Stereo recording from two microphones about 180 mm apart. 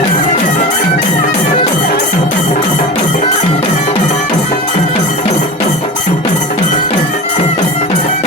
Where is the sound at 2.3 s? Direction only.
40° left (ahead or behind).